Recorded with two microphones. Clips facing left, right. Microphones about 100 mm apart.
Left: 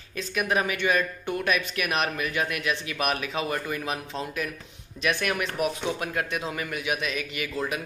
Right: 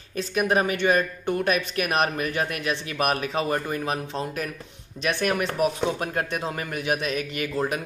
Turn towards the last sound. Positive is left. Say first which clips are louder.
# right 4 dB
turn(degrees=-40)  # may be behind; listen again after turning